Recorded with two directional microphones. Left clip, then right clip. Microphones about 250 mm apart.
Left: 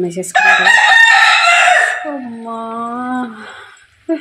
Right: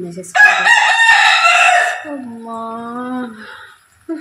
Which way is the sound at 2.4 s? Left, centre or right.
Centre.